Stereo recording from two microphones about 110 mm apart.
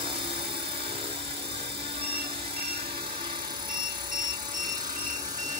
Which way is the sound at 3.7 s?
45° right (ahead or behind).